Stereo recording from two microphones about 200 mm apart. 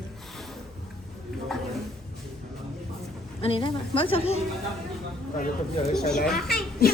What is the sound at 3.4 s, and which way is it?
Speech, 25° left (ahead or behind).